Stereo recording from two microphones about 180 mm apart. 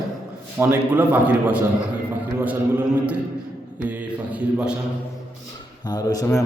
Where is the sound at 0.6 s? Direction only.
10° right (ahead or behind).